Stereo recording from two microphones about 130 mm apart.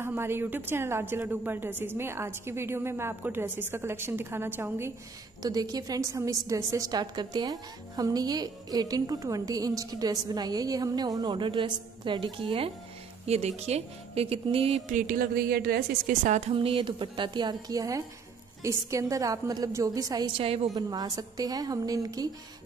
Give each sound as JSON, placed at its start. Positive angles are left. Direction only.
{"t": 0.0, "sound": "a woman's voice", "side_deg": -20}
{"t": 5.4, "sound": "a woman's voice", "side_deg": -30}
{"t": 13.3, "sound": "speech", "side_deg": -55}
{"t": 14.9, "sound": "music", "side_deg": -85}
{"t": 16.1, "sound": "a woman's voice", "side_deg": -70}
{"t": 16.5, "sound": "a woman's voice", "side_deg": -40}
{"t": 20.3, "sound": "speech", "side_deg": -45}
{"t": 20.7, "sound": "a woman's voice", "side_deg": -30}